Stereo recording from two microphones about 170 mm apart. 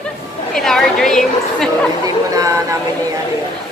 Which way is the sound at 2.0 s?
20° right (ahead or behind).